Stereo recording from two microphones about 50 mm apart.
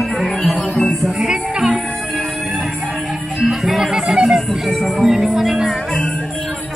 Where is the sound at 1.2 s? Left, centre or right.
Centre.